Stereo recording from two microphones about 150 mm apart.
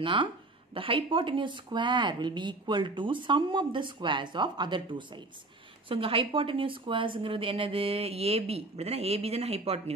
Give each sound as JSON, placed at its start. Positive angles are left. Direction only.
{"t": 0.0, "sound": "speech", "side_deg": -35}